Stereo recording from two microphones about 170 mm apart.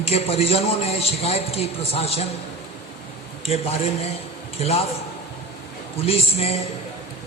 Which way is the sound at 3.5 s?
35° left (ahead or behind).